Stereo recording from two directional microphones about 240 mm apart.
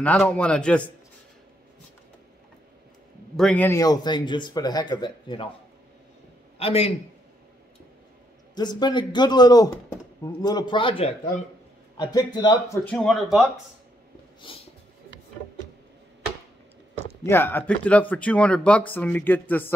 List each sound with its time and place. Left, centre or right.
0.0 s speech: centre
3.3 s speech: centre
6.6 s a man's voice: left
8.5 s a man's voice: centre
12.0 s speech: centre
12.8 s speech: centre
14.4 s a man's voice: left
17.2 s speech: centre